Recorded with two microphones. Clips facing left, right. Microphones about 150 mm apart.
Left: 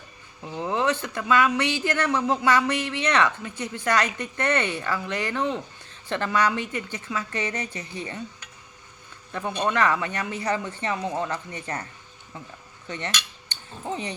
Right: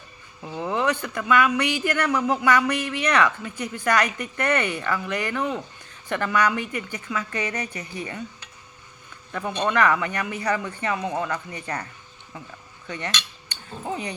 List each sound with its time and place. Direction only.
0.6 s speech: 25° left (ahead or behind)
9.6 s speech: 25° left (ahead or behind)
10.9 s speech: 20° right (ahead or behind)
11.2 s speech: 25° left (ahead or behind)
13.9 s speech: 25° left (ahead or behind)